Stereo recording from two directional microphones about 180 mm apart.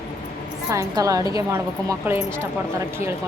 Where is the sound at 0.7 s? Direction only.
15° right (ahead or behind).